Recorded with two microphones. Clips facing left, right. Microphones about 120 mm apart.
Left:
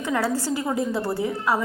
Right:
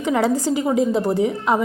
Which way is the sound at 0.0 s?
20° right (ahead or behind).